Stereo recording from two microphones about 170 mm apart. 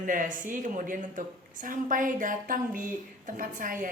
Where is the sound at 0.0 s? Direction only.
50° right (ahead or behind).